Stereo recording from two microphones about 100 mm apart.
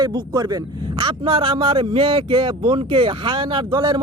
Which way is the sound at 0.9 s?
65° right (ahead or behind).